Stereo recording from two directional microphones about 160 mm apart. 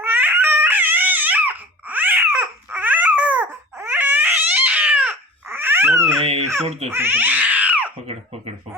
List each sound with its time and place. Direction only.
0.0 s a sound: 15° right (ahead or behind)
6.7 s speech: 40° right (ahead or behind)
6.9 s cat: 15° right (ahead or behind)